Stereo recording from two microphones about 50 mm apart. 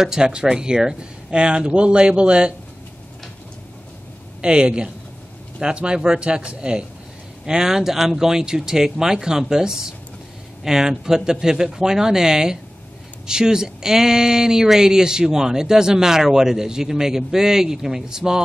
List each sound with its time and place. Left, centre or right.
0.0 s speech: centre
4.4 s speech: centre